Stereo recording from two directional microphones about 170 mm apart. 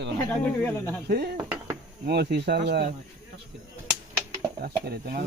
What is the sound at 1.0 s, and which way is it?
Speech, 70° right (ahead or behind).